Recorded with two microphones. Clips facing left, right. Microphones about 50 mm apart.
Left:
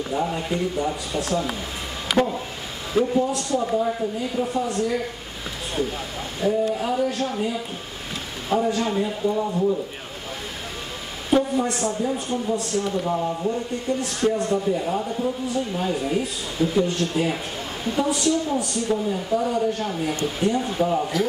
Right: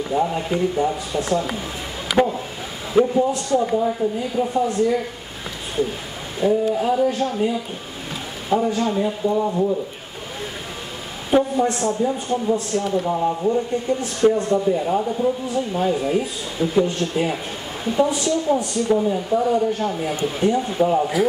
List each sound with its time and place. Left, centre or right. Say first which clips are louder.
0.1 s speech: right 4 dB; centre
2.9 s a man's voice: right 4 dB; right
6.4 s speech: right 4 dB; centre
7.2 s a man's voice: right 4 dB; centre
11.2 s a man's voice: right 3 dB; centre